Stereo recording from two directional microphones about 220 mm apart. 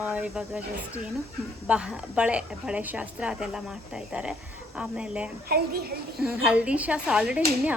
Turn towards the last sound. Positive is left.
turn(degrees=-5)  # may be behind; listen again after turning